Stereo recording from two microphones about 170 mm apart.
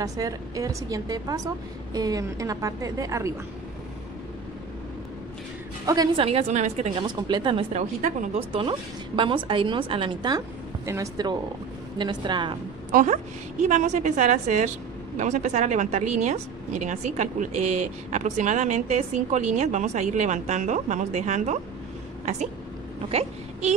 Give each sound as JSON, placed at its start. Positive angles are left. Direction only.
{"t": 0.0, "sound": "a woman's voice", "side_deg": -20}
{"t": 5.9, "sound": "a woman's voice", "side_deg": -20}
{"t": 6.2, "sound": "a woman's voice", "side_deg": -40}
{"t": 7.1, "sound": "a woman's voice", "side_deg": -25}
{"t": 7.7, "sound": "speech", "side_deg": -45}
{"t": 8.5, "sound": "a woman's voice", "side_deg": -30}
{"t": 12.9, "sound": "speech", "side_deg": -45}